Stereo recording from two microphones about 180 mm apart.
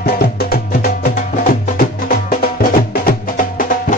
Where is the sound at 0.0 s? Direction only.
55° left (ahead or behind).